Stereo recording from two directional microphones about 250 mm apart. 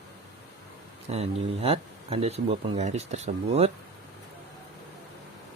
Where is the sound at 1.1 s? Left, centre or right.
Right.